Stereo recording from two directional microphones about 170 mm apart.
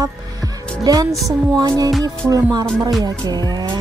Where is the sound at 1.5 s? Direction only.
20° right (ahead or behind).